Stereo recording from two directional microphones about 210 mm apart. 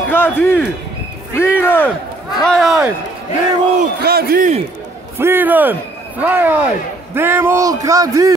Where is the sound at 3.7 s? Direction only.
45° right (ahead or behind).